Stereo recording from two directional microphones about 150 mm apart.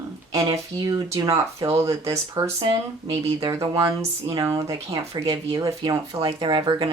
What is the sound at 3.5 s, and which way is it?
Speech, 20° right (ahead or behind).